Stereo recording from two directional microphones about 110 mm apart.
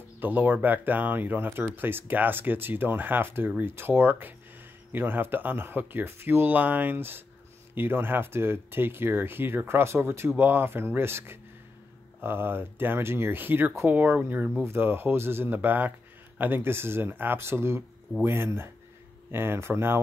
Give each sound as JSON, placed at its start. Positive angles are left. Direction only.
{"t": 0.2, "sound": "speech", "side_deg": -15}